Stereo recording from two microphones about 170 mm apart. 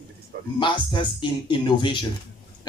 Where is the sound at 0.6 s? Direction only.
30° left (ahead or behind).